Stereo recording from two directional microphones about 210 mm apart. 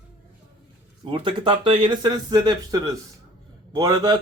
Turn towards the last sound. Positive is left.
turn(degrees=-20)  # may be behind; listen again after turning